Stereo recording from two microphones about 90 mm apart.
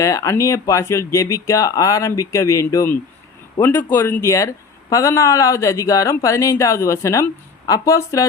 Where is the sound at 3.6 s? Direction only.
25° left (ahead or behind).